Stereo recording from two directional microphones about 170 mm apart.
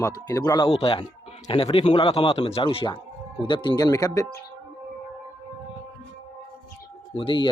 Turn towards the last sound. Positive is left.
turn(degrees=30)  # may be behind; listen again after turning